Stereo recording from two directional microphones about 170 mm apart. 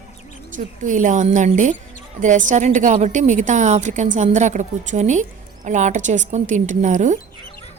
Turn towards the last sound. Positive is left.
turn(degrees=-45)  # may be behind; listen again after turning